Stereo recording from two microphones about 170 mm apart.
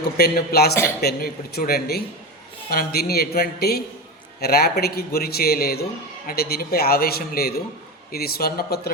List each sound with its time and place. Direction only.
0.0 s a man's voice: 70° left (ahead or behind)